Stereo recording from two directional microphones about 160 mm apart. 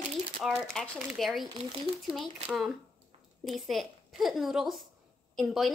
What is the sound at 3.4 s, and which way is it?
Speech, centre (ahead or behind).